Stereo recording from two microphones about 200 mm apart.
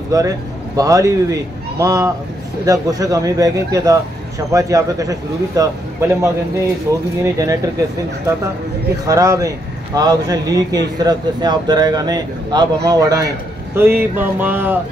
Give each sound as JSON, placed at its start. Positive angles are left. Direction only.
{"t": 0.1, "sound": "speech", "side_deg": -15}
{"t": 9.0, "sound": "speech", "side_deg": -15}